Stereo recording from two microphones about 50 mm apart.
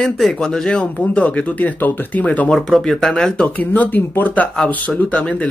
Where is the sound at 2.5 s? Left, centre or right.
Centre.